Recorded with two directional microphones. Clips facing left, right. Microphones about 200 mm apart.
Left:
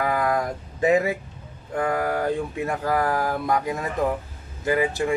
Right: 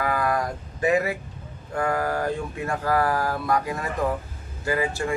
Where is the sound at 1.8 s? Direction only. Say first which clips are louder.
Left 1 dB; 20° left (ahead or behind).